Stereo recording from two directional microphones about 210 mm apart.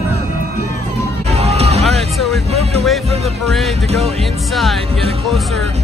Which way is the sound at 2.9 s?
Centre (ahead or behind).